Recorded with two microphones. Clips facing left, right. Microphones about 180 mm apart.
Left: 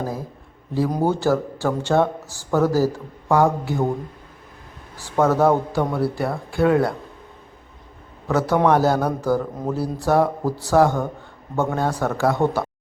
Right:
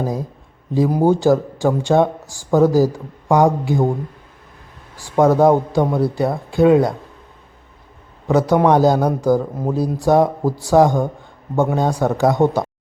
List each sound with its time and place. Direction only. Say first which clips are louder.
0.0 s speech: right 5 dB; 15° right (ahead or behind)
4.9 s speech: right 4 dB; 15° right (ahead or behind)
8.3 s speech: right 4 dB; 15° right (ahead or behind)